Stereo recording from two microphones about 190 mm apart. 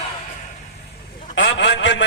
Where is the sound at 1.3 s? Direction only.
70° left (ahead or behind).